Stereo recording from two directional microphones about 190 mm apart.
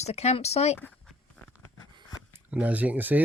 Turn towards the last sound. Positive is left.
turn(degrees=-10)  # may be behind; listen again after turning